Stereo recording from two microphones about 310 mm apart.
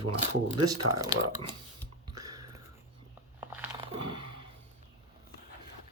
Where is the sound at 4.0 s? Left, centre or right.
Right.